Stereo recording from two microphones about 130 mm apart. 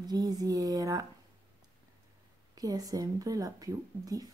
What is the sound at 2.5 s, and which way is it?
Speech, 30° right (ahead or behind).